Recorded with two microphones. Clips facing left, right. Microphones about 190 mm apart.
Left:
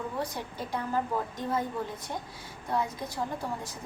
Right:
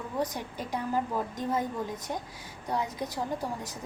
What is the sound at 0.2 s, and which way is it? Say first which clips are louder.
Speech: right 5 dB; 15° right (ahead or behind).